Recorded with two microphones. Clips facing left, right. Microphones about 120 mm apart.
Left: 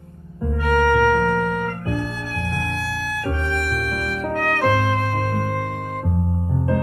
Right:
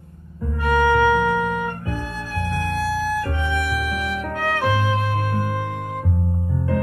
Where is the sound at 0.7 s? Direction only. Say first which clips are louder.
Even; 10° right (ahead or behind).